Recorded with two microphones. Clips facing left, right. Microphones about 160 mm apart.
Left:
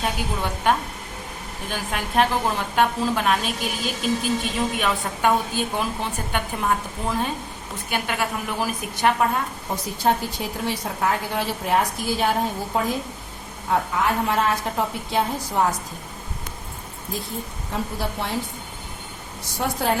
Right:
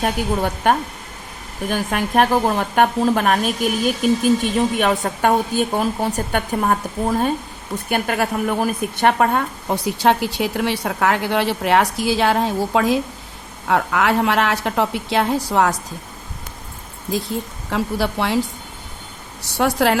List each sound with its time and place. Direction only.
0.0 s a woman's voice: 50° right (ahead or behind); by 13.0 s 90° right
13.7 s a woman's voice: 75° right (ahead or behind)
17.7 s a woman's voice: 80° right
19.5 s a woman's voice: 85° right